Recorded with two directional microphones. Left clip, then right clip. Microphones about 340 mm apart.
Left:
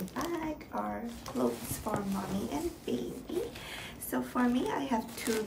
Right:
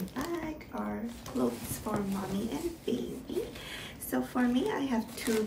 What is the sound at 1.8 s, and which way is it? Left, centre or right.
A woman's voice, centre.